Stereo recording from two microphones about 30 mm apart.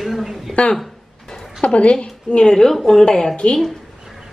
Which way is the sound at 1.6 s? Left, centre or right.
Left.